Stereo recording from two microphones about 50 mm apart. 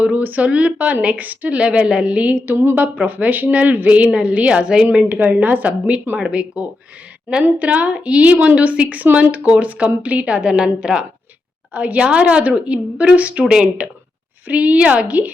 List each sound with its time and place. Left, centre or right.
0.2 s a woman's voice: right
2.5 s a woman's voice: right; by 5.0 s centre
5.0 s a woman's voice: right; by 11.0 s centre
11.7 s a woman's voice: right
14.4 s a woman's voice: right